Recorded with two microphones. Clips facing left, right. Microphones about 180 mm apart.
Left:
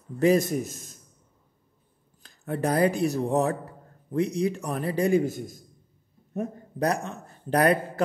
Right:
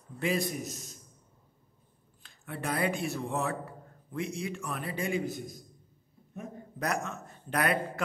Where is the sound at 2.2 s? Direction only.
40° left (ahead or behind).